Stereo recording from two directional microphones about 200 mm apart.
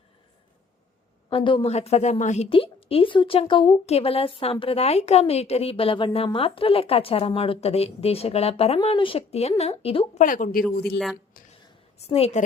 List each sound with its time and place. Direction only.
1.3 s speech: 25° left (ahead or behind)
10.2 s speech: 45° left (ahead or behind)
10.9 s speech: centre (ahead or behind)
11.9 s a woman's voice: 30° left (ahead or behind)